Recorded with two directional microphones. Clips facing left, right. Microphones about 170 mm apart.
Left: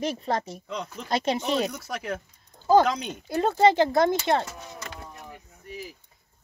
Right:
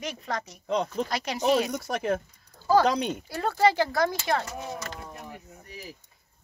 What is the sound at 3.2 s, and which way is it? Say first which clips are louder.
Speech: left 5 dB; 20° left (ahead or behind).